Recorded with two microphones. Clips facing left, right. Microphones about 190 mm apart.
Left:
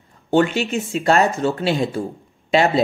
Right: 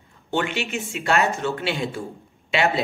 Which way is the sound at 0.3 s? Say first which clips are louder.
Left 8 dB; 40° left (ahead or behind).